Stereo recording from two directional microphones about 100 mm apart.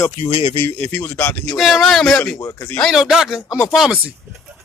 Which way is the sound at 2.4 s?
20° left (ahead or behind).